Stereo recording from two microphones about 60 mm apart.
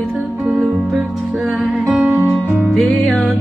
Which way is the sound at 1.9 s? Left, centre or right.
Centre.